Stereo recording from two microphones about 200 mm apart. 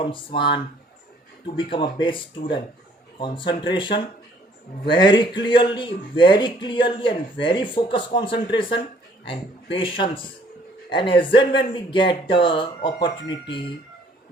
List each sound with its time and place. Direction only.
0.0 s speech: 25° left (ahead or behind)